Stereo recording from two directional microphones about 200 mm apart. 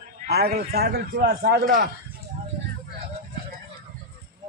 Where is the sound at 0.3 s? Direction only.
50° right (ahead or behind).